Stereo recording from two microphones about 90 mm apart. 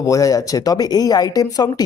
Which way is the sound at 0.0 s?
35° left (ahead or behind).